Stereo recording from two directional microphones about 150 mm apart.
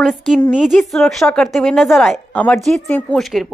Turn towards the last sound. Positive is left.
turn(degrees=0)  # may be behind; listen again after turning